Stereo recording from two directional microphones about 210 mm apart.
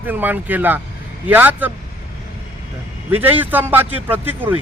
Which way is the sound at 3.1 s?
10° right (ahead or behind).